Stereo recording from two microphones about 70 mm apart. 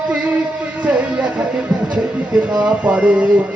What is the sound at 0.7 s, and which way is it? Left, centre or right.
Speech, centre.